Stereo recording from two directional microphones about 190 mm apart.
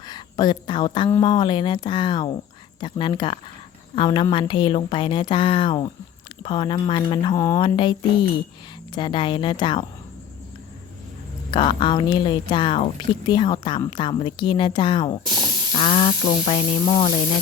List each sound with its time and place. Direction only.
0.0 s speech: 20° left (ahead or behind)
11.5 s speech: 25° left (ahead or behind)